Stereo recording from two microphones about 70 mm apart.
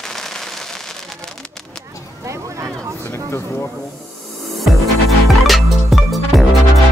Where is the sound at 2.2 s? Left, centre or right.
Right.